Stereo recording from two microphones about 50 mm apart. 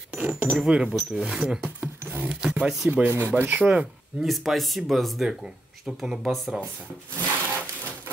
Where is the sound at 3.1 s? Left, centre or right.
Right.